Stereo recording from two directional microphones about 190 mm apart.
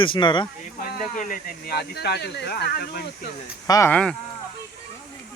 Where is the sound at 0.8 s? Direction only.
45° left (ahead or behind).